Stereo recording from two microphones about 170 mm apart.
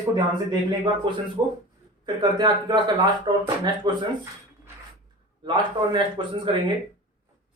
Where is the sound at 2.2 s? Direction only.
25° right (ahead or behind).